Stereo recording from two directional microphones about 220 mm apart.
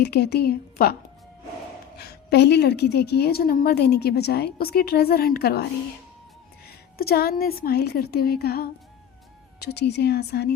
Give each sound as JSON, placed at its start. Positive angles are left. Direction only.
{"t": 0.0, "sound": "a woman's voice", "side_deg": 50}
{"t": 2.0, "sound": "a woman's voice", "side_deg": 50}
{"t": 6.7, "sound": "a woman's voice", "side_deg": 45}